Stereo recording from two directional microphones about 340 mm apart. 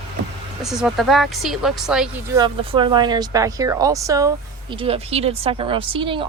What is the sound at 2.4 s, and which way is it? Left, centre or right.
Speech, centre.